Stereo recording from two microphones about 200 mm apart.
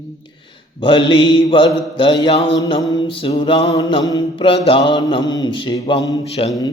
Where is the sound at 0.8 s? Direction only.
25° left (ahead or behind).